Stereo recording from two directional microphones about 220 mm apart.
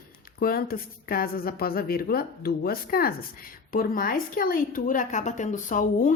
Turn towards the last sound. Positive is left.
turn(degrees=35)  # may be behind; listen again after turning